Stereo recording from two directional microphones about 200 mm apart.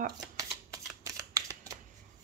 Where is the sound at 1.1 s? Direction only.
15° right (ahead or behind).